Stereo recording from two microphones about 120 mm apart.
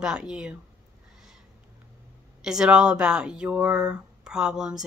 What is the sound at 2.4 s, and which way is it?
Speech, 5° right (ahead or behind).